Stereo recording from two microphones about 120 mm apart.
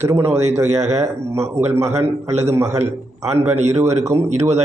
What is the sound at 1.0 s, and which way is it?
Speech, 25° right (ahead or behind).